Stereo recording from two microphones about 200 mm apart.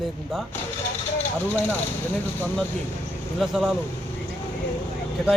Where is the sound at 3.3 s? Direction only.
Centre (ahead or behind).